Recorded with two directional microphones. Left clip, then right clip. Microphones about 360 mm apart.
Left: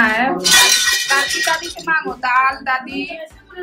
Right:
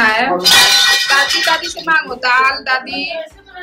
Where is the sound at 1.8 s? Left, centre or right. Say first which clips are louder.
Right 4 dB; centre.